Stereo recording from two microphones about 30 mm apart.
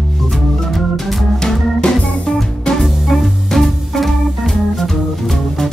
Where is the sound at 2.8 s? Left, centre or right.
Centre.